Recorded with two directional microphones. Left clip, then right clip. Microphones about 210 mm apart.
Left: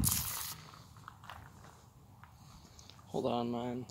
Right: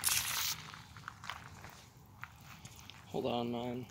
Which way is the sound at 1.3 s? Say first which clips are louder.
Right 5 dB; 10° right (ahead or behind).